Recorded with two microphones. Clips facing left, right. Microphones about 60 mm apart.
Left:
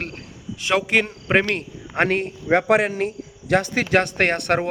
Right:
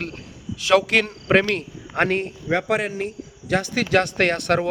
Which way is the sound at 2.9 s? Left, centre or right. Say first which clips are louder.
Left 3 dB; left.